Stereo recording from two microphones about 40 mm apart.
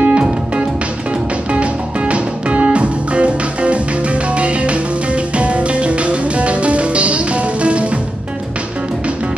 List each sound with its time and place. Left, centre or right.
0.0 s music: right